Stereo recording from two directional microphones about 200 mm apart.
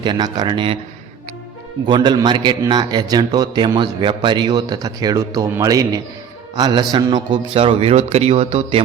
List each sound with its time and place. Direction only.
0.0 s a man's voice: 20° right (ahead or behind)
1.9 s a man's voice: 20° right (ahead or behind)